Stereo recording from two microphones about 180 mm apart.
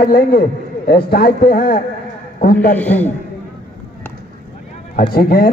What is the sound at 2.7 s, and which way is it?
Speech, 10° left (ahead or behind).